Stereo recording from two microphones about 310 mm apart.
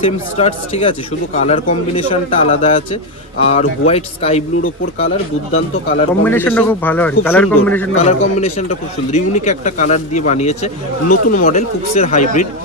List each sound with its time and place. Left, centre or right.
0.0 s speech: centre
6.2 s speech: centre
8.0 s speech: centre